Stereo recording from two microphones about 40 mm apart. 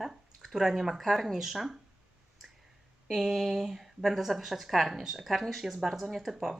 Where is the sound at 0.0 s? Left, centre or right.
Centre.